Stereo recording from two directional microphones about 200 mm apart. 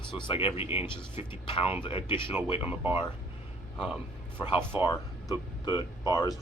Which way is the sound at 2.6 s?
10° right (ahead or behind).